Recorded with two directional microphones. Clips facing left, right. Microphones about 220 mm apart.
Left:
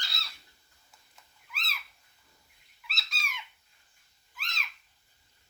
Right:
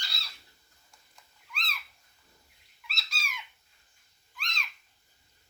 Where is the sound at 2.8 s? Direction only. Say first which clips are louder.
Even; centre (ahead or behind).